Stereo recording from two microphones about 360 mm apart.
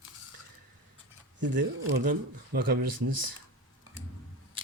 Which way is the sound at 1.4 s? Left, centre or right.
Right.